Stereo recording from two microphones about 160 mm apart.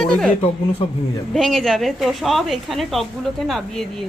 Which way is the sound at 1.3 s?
Centre (ahead or behind).